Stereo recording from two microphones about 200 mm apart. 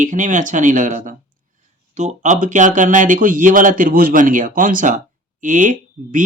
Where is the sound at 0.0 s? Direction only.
40° right (ahead or behind).